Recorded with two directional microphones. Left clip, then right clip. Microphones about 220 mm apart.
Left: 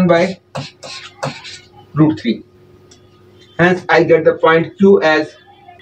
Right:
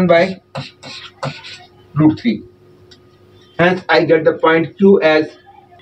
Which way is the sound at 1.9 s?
10° left (ahead or behind).